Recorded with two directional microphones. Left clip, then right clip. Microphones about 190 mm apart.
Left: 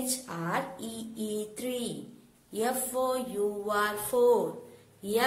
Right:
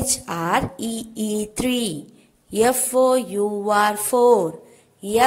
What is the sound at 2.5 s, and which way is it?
A woman's voice, 35° right (ahead or behind).